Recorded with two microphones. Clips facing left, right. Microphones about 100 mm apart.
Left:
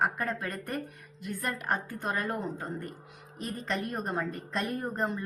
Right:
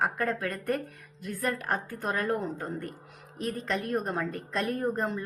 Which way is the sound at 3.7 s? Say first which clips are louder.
Right 2 dB; centre (ahead or behind).